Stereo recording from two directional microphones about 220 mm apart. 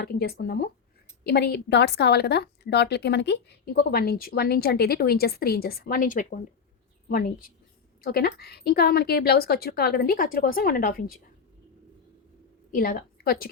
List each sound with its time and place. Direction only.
0.0 s a woman's voice: 45° left (ahead or behind)
12.7 s a woman's voice: 40° left (ahead or behind)